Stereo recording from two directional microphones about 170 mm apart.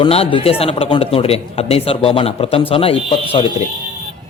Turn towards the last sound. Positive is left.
turn(degrees=35)  # may be behind; listen again after turning